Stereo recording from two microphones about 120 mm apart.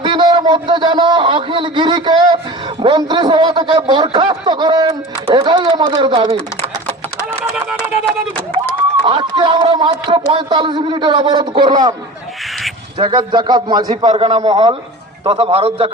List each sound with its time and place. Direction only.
0.0 s a man's voice: 40° right (ahead or behind)
9.0 s a man's voice: 45° right (ahead or behind)
13.0 s a man's voice: 40° right (ahead or behind)
13.9 s a man's voice: 50° right (ahead or behind)
14.5 s a man's voice: 40° right (ahead or behind)